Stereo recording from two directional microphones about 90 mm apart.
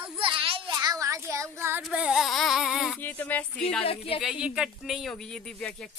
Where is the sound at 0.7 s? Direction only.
40° right (ahead or behind).